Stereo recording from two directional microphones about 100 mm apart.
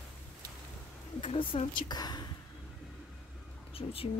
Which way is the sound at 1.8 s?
45° left (ahead or behind).